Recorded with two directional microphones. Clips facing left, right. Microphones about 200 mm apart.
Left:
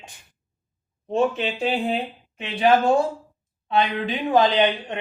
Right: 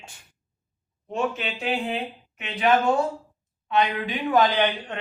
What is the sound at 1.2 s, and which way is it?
A woman's voice, 30° left (ahead or behind).